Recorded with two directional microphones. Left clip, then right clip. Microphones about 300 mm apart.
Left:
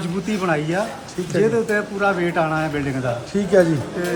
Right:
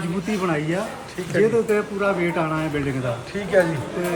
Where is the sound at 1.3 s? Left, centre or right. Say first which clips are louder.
Even; centre.